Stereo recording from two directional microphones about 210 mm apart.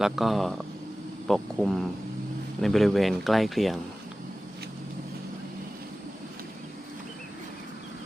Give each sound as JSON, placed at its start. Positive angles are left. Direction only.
{"t": 0.0, "sound": "speech", "side_deg": 0}